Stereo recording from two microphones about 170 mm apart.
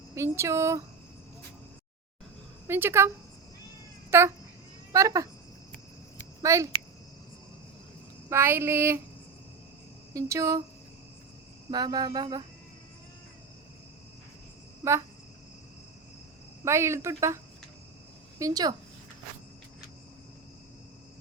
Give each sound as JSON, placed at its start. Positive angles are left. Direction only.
{"t": 0.1, "sound": "speech", "side_deg": -15}
{"t": 2.6, "sound": "speech", "side_deg": -15}
{"t": 4.1, "sound": "speech", "side_deg": -15}
{"t": 6.4, "sound": "a child's voice", "side_deg": -20}
{"t": 8.3, "sound": "speech", "side_deg": -15}
{"t": 10.1, "sound": "speech", "side_deg": -20}
{"t": 11.7, "sound": "speech", "side_deg": -25}
{"t": 16.6, "sound": "speech", "side_deg": -15}